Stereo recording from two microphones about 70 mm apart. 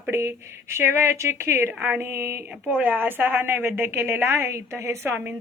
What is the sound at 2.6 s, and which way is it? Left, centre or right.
A woman's voice, right.